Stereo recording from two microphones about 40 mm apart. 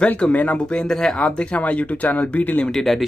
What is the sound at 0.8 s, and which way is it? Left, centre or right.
Speech, centre.